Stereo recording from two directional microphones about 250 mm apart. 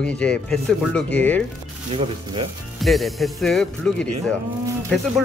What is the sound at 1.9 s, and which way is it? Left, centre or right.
Speech, right.